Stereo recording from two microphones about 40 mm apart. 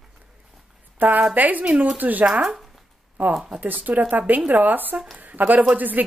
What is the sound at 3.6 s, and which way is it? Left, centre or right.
Speech, right.